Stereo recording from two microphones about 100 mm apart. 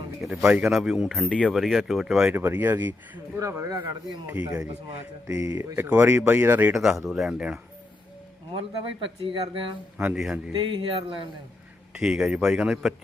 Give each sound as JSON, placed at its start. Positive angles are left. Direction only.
{"t": 0.2, "sound": "speech", "side_deg": 0}
{"t": 1.3, "sound": "speech", "side_deg": 10}
{"t": 1.5, "sound": "speech", "side_deg": 0}
{"t": 2.3, "sound": "speech", "side_deg": -20}
{"t": 3.3, "sound": "speech", "side_deg": -30}
{"t": 4.3, "sound": "a man's voice", "side_deg": -15}
{"t": 5.4, "sound": "speech", "side_deg": -35}
{"t": 5.7, "sound": "speech", "side_deg": -20}
{"t": 6.7, "sound": "a man's voice", "side_deg": -5}
{"t": 8.5, "sound": "speech", "side_deg": -60}
{"t": 10.2, "sound": "a man's voice", "side_deg": -5}
{"t": 10.8, "sound": "speech", "side_deg": -55}
{"t": 11.9, "sound": "a man's voice", "side_deg": -5}